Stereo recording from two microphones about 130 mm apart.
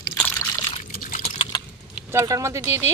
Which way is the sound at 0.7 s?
65° left (ahead or behind).